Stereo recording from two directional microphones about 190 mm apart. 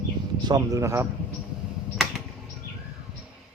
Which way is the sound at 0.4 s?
20° right (ahead or behind).